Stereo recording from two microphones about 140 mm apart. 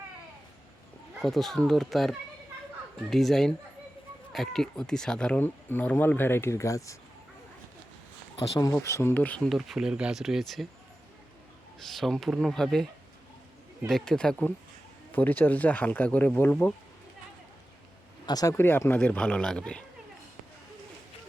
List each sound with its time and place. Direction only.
1.2 s speech: centre (ahead or behind); by 6.9 s 20° left (ahead or behind)
8.5 s speech: 25° left (ahead or behind); by 10.7 s centre (ahead or behind)
11.8 s speech: centre (ahead or behind)
18.3 s speech: 25° left (ahead or behind)
18.5 s speech: 15° left (ahead or behind)